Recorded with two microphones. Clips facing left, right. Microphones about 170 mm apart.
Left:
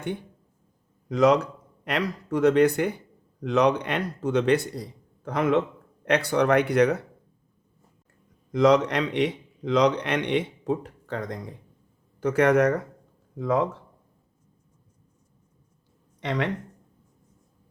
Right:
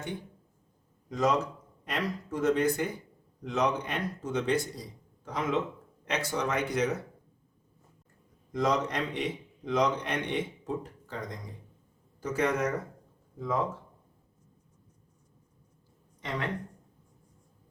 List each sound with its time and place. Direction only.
1.0 s speech: 75° left (ahead or behind)
8.5 s speech: 75° left (ahead or behind)
16.2 s speech: 75° left (ahead or behind)